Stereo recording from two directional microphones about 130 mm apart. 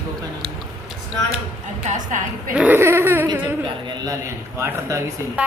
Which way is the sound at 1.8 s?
75° right (ahead or behind).